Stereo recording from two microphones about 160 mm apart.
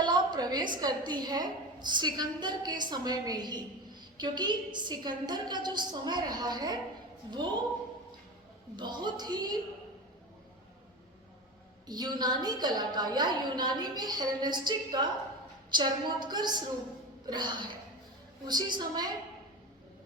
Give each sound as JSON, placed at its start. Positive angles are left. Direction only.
{"t": 0.0, "sound": "a sound", "side_deg": -25}
{"t": 0.8, "sound": "a woman's voice", "side_deg": -25}
{"t": 8.7, "sound": "a woman's voice", "side_deg": -30}
{"t": 11.9, "sound": "a woman's voice", "side_deg": -25}